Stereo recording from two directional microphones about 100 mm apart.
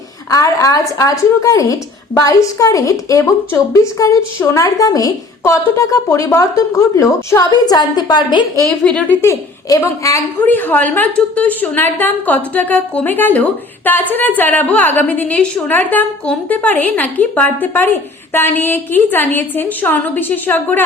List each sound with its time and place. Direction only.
0.3 s a woman's voice: 35° left (ahead or behind); by 8.4 s 50° left (ahead or behind)
8.6 s a woman's voice: 10° left (ahead or behind)
9.2 s a woman's voice: 35° left (ahead or behind)
10.4 s a woman's voice: 20° left (ahead or behind)